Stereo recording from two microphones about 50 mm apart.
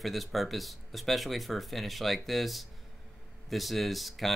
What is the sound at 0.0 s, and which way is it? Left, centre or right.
Speech, centre.